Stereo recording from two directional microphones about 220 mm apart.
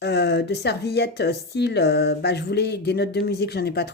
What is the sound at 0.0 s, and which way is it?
Speech, 50° left (ahead or behind).